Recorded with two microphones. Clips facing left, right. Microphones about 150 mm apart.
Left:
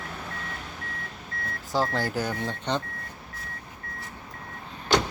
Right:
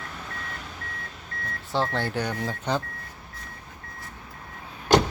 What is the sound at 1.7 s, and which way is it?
Speech, 10° left (ahead or behind).